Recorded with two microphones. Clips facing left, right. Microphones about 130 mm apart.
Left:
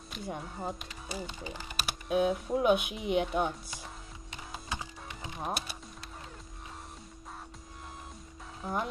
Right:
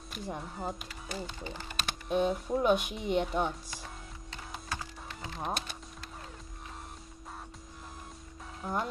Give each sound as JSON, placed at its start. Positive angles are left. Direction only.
{"t": 0.1, "sound": "speech", "side_deg": 0}
{"t": 1.1, "sound": "speech", "side_deg": 10}
{"t": 4.3, "sound": "music", "side_deg": 15}
{"t": 5.4, "sound": "speech", "side_deg": 10}
{"t": 8.6, "sound": "speech", "side_deg": 0}